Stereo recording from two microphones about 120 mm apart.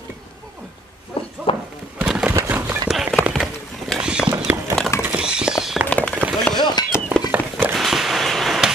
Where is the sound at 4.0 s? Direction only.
5° right (ahead or behind).